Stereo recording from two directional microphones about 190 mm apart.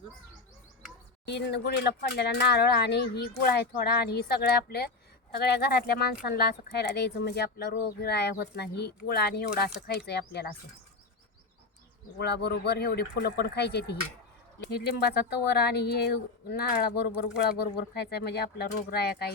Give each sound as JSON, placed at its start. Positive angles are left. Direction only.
{"t": 1.3, "sound": "speech", "side_deg": 60}
{"t": 12.2, "sound": "speech", "side_deg": 60}